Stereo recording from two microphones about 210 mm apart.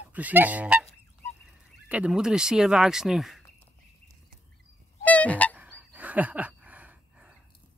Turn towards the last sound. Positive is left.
turn(degrees=-5)  # may be behind; listen again after turning